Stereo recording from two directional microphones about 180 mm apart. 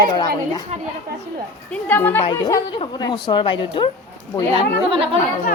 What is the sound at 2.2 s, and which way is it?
Speech, 20° left (ahead or behind).